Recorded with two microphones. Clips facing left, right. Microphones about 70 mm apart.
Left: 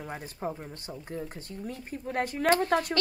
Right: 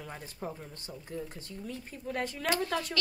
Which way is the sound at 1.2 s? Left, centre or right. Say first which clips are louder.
Left 3 dB; left.